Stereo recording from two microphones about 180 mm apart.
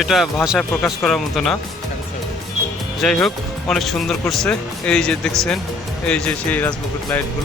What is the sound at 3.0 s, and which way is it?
Speech, 5° left (ahead or behind).